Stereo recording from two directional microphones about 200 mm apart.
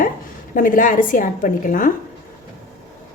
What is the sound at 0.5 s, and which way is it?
A woman's voice, 40° left (ahead or behind).